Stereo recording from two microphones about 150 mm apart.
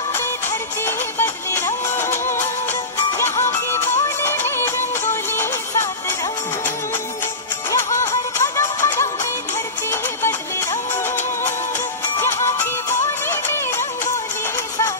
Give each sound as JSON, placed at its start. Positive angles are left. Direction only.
{"t": 0.1, "sound": "music", "side_deg": 15}
{"t": 3.2, "sound": "music", "side_deg": 15}
{"t": 7.7, "sound": "music", "side_deg": 20}